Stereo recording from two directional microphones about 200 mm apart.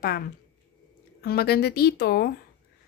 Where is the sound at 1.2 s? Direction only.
50° left (ahead or behind).